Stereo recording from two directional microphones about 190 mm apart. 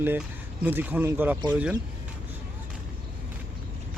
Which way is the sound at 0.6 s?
10° right (ahead or behind).